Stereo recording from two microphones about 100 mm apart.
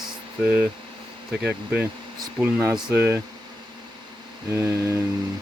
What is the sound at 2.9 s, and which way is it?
Speech, 25° right (ahead or behind).